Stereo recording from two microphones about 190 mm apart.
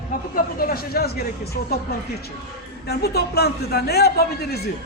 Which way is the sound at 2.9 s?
55° left (ahead or behind).